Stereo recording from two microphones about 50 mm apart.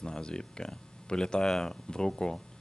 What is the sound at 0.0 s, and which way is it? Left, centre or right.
Speech, centre.